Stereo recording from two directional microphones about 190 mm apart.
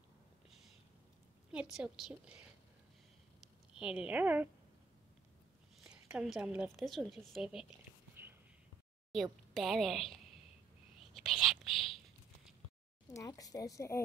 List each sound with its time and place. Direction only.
1.5 s a woman's voice: 5° right (ahead or behind)
3.7 s speech: 5° right (ahead or behind)
5.9 s a woman's voice: 5° right (ahead or behind)
8.2 s whispering: 10° right (ahead or behind)
9.1 s a woman's voice: centre (ahead or behind)
11.0 s whispering: centre (ahead or behind)
13.1 s a woman's voice: 15° left (ahead or behind)